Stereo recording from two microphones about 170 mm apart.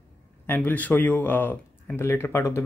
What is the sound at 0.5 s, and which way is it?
Speech, 10° left (ahead or behind).